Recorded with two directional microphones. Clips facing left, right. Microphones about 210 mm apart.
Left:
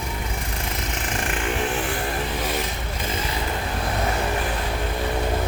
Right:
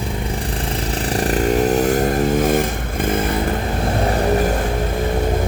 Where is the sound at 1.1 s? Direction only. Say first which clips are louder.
Right 10 dB; 35° right (ahead or behind); by 3.3 s 55° right (ahead or behind).